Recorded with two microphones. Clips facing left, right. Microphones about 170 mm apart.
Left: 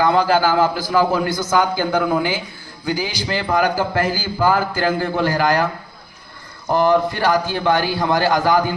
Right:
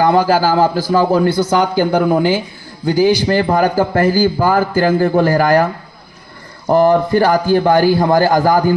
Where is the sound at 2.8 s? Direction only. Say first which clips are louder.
Right 11 dB; 45° right (ahead or behind).